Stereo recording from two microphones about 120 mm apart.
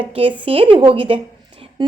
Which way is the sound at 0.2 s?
50° right (ahead or behind).